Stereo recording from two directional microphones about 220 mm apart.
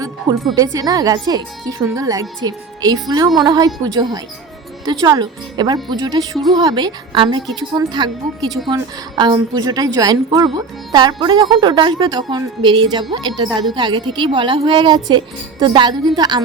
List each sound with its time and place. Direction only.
0.5 s a woman's voice: 15° right (ahead or behind)